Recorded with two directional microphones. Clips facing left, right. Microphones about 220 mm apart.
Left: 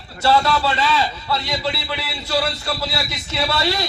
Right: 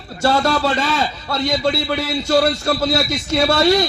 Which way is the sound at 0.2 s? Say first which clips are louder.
Right 1 dB; 45° right (ahead or behind).